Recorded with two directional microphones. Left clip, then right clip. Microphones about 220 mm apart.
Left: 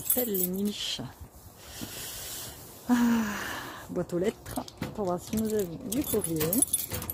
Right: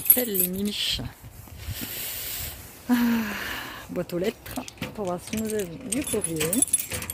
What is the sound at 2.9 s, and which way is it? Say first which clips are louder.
Speech: right 2 dB; 5° left (ahead or behind).